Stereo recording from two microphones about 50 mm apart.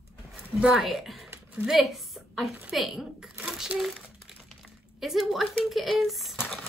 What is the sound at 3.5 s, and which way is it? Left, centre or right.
Crumpling, centre.